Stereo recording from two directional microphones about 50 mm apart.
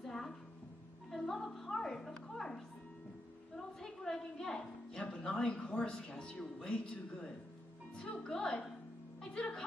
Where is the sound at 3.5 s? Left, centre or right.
Centre.